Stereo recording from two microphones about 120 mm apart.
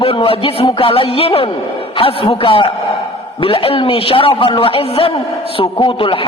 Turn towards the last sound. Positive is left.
turn(degrees=45)  # may be behind; listen again after turning